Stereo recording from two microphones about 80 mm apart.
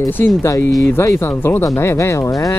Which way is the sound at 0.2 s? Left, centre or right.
Left.